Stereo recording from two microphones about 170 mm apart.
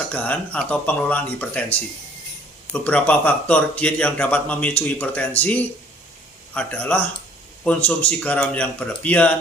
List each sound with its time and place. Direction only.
0.1 s speech: 10° left (ahead or behind)